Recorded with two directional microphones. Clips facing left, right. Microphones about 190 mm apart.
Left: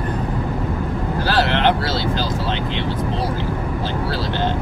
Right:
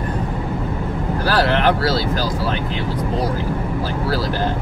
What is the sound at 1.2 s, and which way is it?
Vehicle, 25° left (ahead or behind).